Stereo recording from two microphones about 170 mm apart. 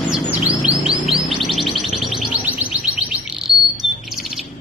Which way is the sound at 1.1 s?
Centre (ahead or behind).